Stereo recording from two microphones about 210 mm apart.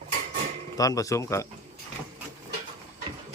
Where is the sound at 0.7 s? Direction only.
15° left (ahead or behind).